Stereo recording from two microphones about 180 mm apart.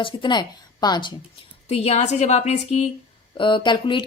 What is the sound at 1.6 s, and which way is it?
Speech, 35° left (ahead or behind).